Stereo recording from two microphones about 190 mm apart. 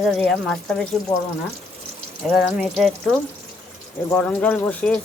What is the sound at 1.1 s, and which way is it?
Speech, 20° left (ahead or behind).